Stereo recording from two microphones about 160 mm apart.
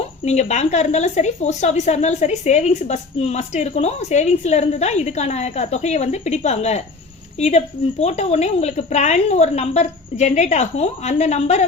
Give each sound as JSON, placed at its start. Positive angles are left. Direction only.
{"t": 0.3, "sound": "a woman's voice", "side_deg": 45}